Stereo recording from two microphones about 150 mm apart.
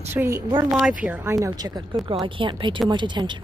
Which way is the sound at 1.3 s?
25° right (ahead or behind).